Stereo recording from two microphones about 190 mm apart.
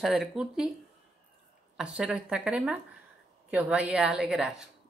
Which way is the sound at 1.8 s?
5° right (ahead or behind).